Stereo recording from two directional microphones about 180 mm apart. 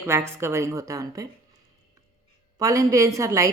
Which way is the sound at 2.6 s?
20° right (ahead or behind).